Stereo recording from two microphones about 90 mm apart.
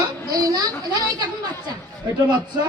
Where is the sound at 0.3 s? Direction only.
45° right (ahead or behind).